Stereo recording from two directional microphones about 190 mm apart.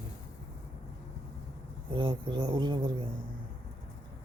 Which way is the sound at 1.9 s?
25° right (ahead or behind).